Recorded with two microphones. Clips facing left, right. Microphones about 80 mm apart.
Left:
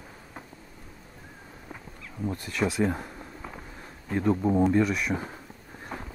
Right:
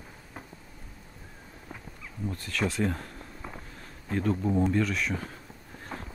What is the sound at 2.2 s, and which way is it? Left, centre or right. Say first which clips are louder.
Speech: left 3 dB; left.